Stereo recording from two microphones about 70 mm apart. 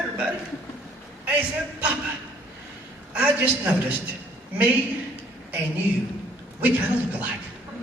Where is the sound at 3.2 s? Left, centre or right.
Right.